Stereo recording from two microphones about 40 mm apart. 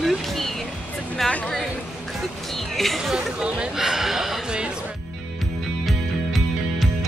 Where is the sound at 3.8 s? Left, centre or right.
Centre.